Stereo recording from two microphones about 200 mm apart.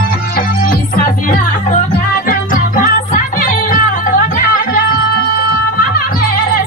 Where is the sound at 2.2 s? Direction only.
40° left (ahead or behind).